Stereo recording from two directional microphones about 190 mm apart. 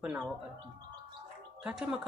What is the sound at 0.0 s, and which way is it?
Speech, 5° right (ahead or behind).